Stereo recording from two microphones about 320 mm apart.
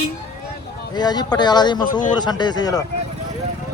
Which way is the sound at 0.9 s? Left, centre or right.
Centre.